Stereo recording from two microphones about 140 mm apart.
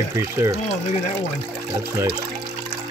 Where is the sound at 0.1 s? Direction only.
20° right (ahead or behind).